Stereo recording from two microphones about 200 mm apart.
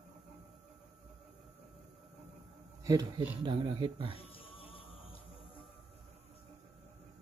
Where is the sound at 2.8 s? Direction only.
20° right (ahead or behind).